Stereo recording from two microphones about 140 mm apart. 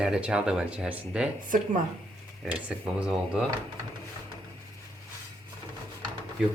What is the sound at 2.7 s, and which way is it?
Speech, 5° right (ahead or behind).